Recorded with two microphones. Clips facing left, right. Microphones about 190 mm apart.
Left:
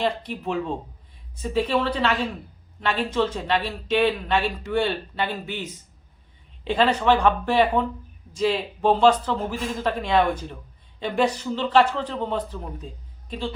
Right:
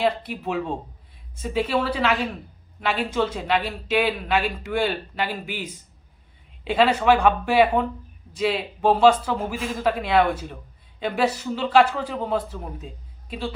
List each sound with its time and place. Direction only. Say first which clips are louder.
0.0 s a man's voice: right 2 dB; 5° right (ahead or behind)